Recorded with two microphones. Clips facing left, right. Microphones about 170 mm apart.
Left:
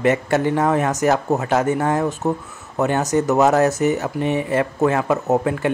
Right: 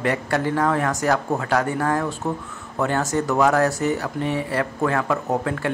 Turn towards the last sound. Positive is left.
turn(degrees=20)  # may be behind; listen again after turning